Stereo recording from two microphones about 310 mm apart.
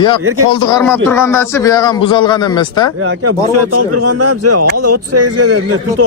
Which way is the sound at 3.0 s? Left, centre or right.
Right.